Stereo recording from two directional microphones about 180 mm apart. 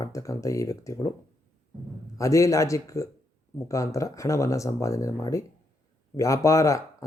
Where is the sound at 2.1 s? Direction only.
15° left (ahead or behind).